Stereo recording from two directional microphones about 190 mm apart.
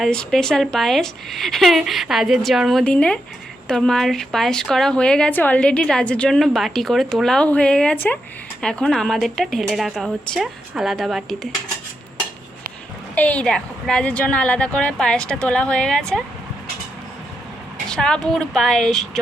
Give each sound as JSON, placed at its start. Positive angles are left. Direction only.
{"t": 0.0, "sound": "a woman's voice", "side_deg": 0}
{"t": 13.1, "sound": "a woman's voice", "side_deg": 5}
{"t": 17.8, "sound": "a woman's voice", "side_deg": 5}